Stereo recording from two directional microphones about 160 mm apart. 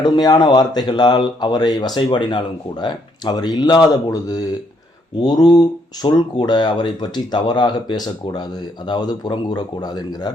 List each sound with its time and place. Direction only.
0.0 s speech: 25° left (ahead or behind)